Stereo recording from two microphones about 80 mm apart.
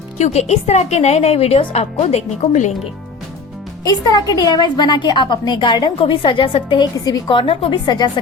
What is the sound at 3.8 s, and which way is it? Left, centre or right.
A woman's voice, left.